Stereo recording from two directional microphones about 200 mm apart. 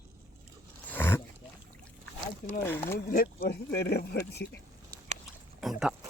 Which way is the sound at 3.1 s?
50° left (ahead or behind).